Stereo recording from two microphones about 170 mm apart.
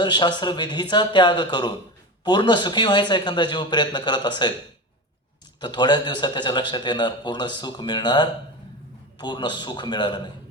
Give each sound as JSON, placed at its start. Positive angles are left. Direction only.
{"t": 0.0, "sound": "a man's voice", "side_deg": 25}
{"t": 5.5, "sound": "a man's voice", "side_deg": 25}